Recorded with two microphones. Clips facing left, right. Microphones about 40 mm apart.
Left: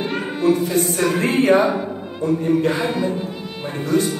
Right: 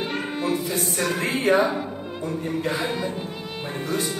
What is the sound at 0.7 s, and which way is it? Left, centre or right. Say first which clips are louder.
A capella: left 6 dB; left.